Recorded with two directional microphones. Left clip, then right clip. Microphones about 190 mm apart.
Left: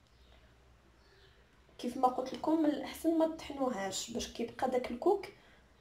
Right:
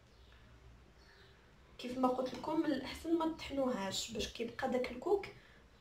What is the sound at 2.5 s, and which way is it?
A woman's voice, 30° left (ahead or behind).